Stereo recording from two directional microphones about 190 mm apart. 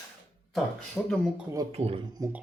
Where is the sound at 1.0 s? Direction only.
Centre (ahead or behind).